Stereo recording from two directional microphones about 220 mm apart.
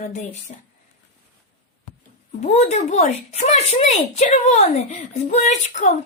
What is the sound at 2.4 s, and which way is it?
Speech, 30° left (ahead or behind).